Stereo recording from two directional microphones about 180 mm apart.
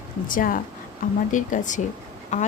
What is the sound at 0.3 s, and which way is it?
A woman's voice, 50° left (ahead or behind).